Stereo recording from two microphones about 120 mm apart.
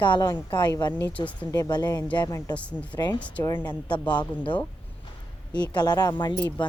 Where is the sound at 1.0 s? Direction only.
15° left (ahead or behind).